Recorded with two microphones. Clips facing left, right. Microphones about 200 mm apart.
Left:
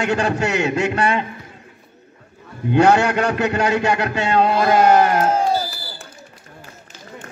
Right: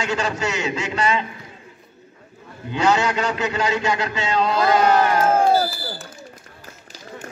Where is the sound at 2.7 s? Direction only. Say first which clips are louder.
Left 5 dB; 60° left (ahead or behind).